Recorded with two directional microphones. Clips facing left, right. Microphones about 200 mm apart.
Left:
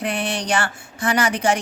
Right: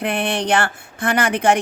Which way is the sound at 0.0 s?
55° right (ahead or behind).